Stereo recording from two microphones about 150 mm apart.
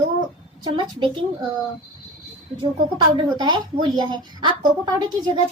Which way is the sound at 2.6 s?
30° right (ahead or behind).